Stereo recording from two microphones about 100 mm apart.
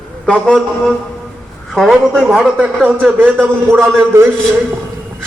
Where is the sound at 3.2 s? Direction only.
20° right (ahead or behind).